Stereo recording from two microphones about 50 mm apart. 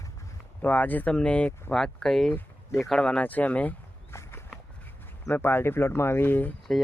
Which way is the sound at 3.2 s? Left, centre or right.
Left.